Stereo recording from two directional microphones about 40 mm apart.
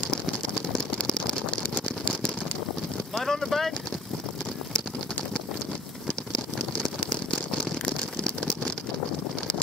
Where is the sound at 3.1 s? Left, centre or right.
Centre.